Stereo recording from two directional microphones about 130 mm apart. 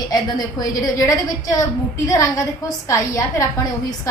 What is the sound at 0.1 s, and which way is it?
A woman's voice, 30° left (ahead or behind).